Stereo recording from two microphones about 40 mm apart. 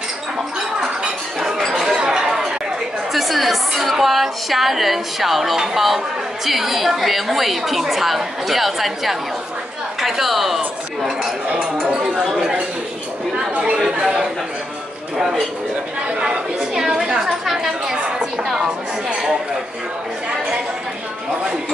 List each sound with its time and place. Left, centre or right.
2.0 s chatter: centre
3.1 s music: centre
4.0 s a woman's voice: centre
11.0 s cutlery: centre
11.8 s chink: centre
13.8 s a woman's voice: centre
17.0 s chatter: centre
18.6 s a woman's voice: centre